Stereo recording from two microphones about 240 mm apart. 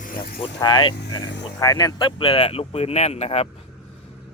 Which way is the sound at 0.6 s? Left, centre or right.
Centre.